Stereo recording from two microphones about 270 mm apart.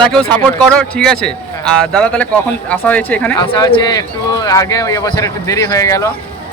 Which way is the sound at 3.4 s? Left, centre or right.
Centre.